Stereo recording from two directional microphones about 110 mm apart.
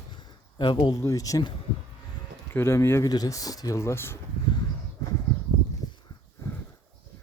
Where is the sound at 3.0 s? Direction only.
35° left (ahead or behind).